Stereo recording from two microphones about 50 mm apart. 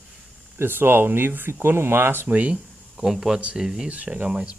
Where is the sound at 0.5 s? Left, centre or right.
Right.